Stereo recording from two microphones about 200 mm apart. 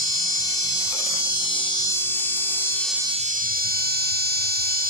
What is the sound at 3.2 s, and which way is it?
Music, 40° right (ahead or behind).